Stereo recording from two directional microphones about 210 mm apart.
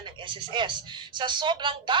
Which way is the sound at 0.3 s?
20° right (ahead or behind).